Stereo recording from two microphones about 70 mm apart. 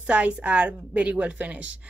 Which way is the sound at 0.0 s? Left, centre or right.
Centre.